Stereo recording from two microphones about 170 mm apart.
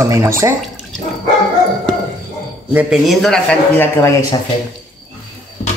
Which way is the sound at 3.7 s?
15° left (ahead or behind).